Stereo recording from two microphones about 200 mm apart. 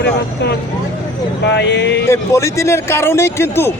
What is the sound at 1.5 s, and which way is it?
Speech, 60° left (ahead or behind).